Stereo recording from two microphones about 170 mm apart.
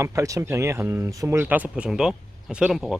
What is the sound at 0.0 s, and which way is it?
Speech, 20° right (ahead or behind).